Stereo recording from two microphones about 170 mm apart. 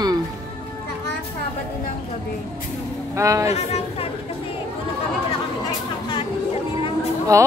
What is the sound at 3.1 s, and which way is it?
Speech, 20° right (ahead or behind).